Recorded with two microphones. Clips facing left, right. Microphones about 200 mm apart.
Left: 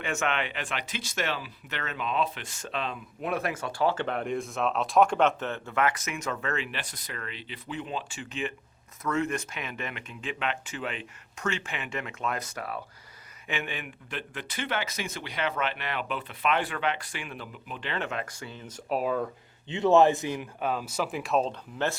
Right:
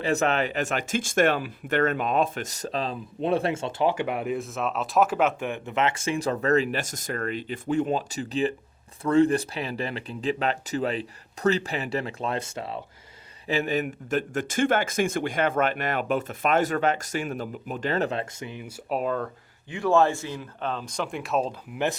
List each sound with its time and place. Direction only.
0.0 s speech: 35° right (ahead or behind)
13.5 s speech: 40° right (ahead or behind); by 18.7 s 15° right (ahead or behind)
18.9 s speech: 5° left (ahead or behind)
19.6 s speech: 20° left (ahead or behind); by 21.5 s centre (ahead or behind)